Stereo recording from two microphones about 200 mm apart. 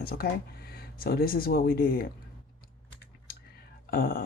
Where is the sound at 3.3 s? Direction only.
45° left (ahead or behind).